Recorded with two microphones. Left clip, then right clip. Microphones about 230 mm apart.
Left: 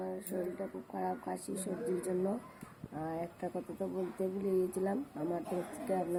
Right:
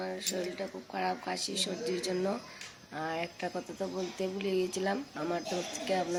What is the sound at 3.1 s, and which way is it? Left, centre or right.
Speech, centre.